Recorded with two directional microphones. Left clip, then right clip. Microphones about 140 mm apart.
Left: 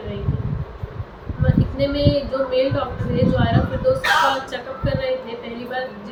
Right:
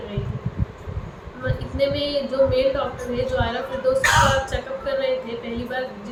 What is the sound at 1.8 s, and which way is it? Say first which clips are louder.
A woman's voice: left 1 dB; 5° right (ahead or behind).